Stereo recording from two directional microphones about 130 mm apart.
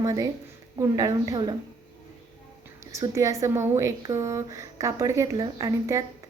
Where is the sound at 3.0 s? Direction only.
25° right (ahead or behind).